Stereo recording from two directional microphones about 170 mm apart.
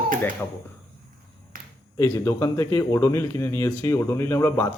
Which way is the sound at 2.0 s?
20° left (ahead or behind).